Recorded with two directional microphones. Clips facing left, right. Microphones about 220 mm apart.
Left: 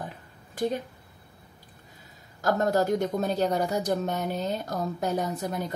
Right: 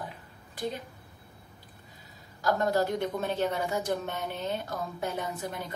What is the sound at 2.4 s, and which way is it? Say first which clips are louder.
A woman's voice: left 3 dB; 45° left (ahead or behind).